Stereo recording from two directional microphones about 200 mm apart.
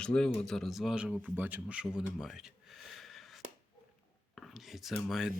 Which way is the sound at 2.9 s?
Centre (ahead or behind).